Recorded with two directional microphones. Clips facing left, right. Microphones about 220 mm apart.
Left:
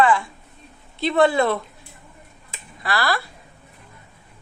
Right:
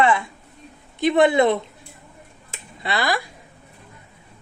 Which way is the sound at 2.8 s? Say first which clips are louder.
Even; 20° right (ahead or behind).